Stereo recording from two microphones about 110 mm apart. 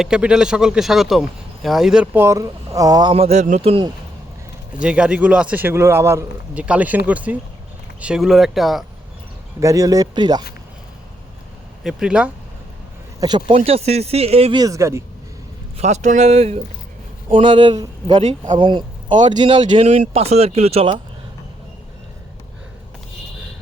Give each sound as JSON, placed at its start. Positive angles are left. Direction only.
{"t": 0.0, "sound": "speech", "side_deg": -5}
{"t": 2.1, "sound": "speech", "side_deg": -25}
{"t": 3.1, "sound": "a man's voice", "side_deg": -75}
{"t": 4.8, "sound": "a man's voice", "side_deg": -10}
{"t": 6.5, "sound": "a man's voice", "side_deg": -10}
{"t": 9.6, "sound": "speech", "side_deg": -30}
{"t": 11.8, "sound": "speech", "side_deg": -5}
{"t": 13.1, "sound": "speech", "side_deg": -40}
{"t": 13.7, "sound": "speech", "side_deg": -70}
{"t": 14.5, "sound": "speech", "side_deg": -35}
{"t": 15.8, "sound": "speech", "side_deg": -90}
{"t": 17.2, "sound": "speech", "side_deg": -50}
{"t": 19.8, "sound": "speech", "side_deg": -70}